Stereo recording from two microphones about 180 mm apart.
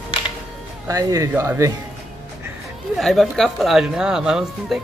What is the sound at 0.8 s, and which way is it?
Speech, 20° right (ahead or behind).